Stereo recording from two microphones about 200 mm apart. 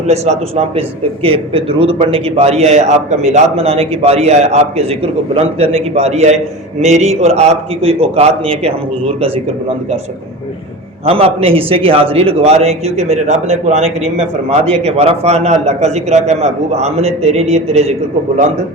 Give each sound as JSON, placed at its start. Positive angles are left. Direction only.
{"t": 0.1, "sound": "a man's voice", "side_deg": -30}
{"t": 11.0, "sound": "a man's voice", "side_deg": -30}